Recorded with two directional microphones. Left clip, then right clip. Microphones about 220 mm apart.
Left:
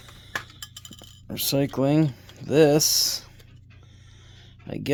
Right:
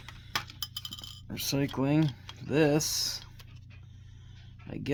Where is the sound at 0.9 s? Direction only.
40° left (ahead or behind).